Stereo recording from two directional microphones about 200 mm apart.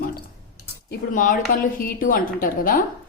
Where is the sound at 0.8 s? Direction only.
40° left (ahead or behind).